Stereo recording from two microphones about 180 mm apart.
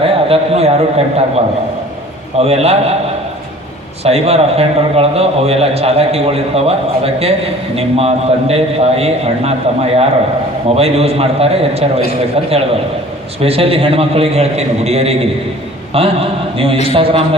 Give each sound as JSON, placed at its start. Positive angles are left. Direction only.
{"t": 0.0, "sound": "a man's voice", "side_deg": -30}
{"t": 4.0, "sound": "a man's voice", "side_deg": -35}